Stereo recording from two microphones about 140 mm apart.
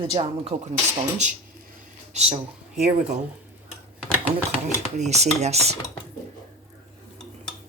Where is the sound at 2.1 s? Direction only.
50° right (ahead or behind).